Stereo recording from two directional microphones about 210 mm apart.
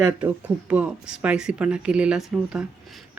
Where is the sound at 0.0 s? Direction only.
5° right (ahead or behind).